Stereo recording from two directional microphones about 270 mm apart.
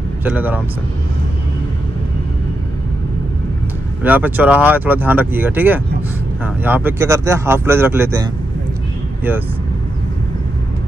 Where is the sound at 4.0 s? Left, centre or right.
Centre.